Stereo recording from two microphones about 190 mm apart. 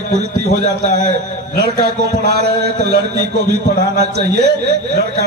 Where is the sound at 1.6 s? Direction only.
55° right (ahead or behind).